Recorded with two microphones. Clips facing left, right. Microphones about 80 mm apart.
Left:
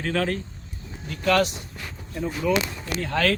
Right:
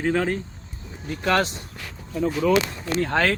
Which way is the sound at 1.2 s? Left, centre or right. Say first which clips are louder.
Left 1 dB; right.